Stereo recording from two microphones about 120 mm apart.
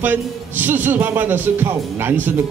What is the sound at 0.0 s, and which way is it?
Speech, 15° right (ahead or behind).